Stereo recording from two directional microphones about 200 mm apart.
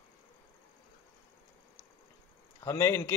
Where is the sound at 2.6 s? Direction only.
15° left (ahead or behind).